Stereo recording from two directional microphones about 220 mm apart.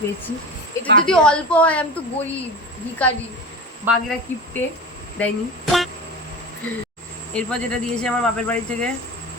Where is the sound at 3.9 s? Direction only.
10° right (ahead or behind).